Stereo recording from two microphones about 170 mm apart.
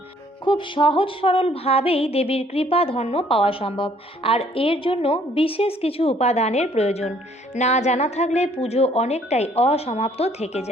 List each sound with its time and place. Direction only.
0.4 s music: 30° left (ahead or behind)